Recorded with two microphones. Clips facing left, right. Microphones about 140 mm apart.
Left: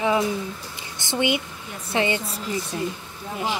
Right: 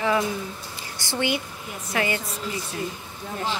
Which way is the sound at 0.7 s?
20° left (ahead or behind).